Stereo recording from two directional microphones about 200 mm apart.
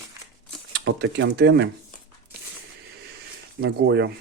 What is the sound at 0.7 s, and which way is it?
Speech, 60° right (ahead or behind).